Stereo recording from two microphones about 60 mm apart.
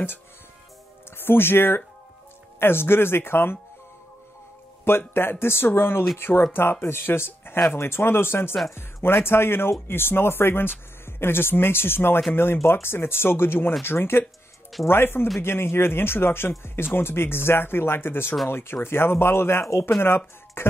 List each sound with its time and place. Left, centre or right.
1.1 s speech: left
4.8 s speech: left
20.6 s music: left